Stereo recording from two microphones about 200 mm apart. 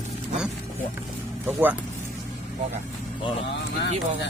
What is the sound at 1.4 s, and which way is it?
Speech, 10° right (ahead or behind).